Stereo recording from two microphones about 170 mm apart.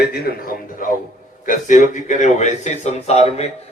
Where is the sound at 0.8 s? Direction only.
55° left (ahead or behind).